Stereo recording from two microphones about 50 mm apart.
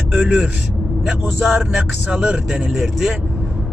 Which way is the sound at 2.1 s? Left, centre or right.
Centre.